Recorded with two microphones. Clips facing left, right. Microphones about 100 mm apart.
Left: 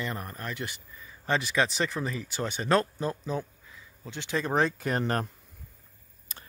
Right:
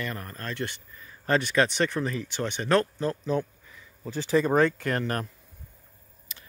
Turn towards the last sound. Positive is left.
turn(degrees=30)  # may be behind; listen again after turning